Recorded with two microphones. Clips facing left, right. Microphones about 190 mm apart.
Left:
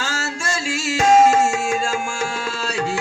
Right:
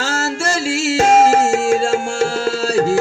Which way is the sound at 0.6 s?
45° right (ahead or behind).